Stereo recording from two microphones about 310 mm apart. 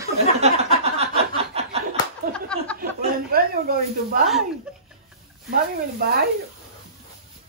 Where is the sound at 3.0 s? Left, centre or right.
Right.